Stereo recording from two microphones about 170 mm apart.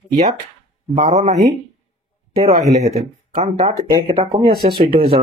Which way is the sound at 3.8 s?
25° right (ahead or behind).